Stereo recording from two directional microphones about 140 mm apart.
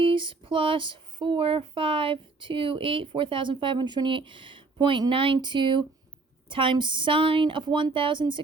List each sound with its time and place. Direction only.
0.0 s speech: 35° right (ahead or behind)